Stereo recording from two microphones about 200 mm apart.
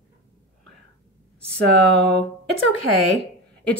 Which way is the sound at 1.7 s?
5° left (ahead or behind).